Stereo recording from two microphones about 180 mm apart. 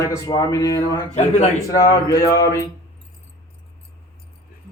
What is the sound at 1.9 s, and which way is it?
Speech, 20° left (ahead or behind).